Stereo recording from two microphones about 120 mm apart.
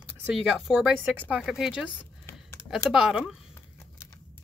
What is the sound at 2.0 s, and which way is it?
Typing, 20° left (ahead or behind).